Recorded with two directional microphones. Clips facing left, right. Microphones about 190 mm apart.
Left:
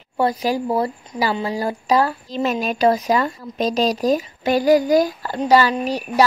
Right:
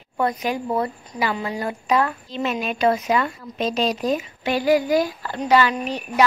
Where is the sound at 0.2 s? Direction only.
30° left (ahead or behind).